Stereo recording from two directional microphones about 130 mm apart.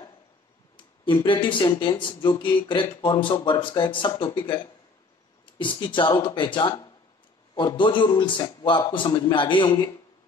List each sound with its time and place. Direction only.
1.0 s speech: 40° left (ahead or behind)